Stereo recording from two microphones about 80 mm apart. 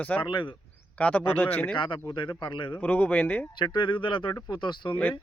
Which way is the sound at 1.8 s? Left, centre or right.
Left.